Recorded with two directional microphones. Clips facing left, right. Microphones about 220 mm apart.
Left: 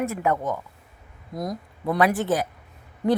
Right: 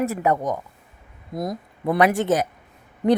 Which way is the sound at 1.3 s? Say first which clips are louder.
Right 2 dB; 5° right (ahead or behind).